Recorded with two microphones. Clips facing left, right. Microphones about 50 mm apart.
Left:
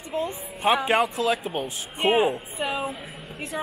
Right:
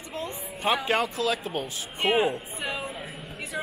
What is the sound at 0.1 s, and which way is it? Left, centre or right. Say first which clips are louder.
A woman's voice: left 6 dB; left.